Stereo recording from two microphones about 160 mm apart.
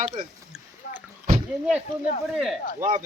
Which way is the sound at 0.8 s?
90° left.